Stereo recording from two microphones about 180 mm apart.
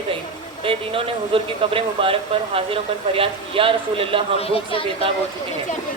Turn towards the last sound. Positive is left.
turn(degrees=30)  # may be behind; listen again after turning